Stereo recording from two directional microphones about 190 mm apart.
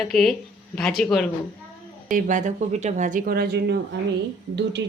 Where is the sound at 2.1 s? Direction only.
40° right (ahead or behind).